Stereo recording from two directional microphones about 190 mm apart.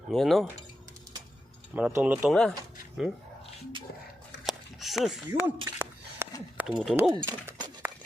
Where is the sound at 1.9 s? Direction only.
10° right (ahead or behind).